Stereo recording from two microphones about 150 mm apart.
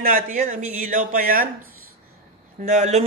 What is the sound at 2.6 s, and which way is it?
Speech, 50° right (ahead or behind).